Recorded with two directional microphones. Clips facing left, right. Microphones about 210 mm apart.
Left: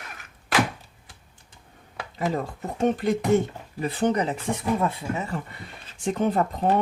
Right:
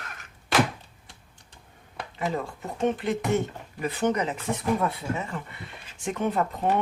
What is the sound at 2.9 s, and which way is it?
Speech, 40° left (ahead or behind).